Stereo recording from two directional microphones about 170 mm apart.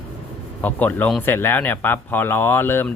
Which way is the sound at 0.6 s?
10° left (ahead or behind).